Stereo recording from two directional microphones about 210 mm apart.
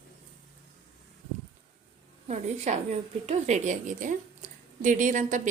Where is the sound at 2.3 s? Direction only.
30° right (ahead or behind).